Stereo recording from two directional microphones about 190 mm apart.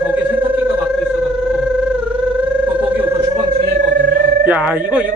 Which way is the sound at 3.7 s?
55° right (ahead or behind).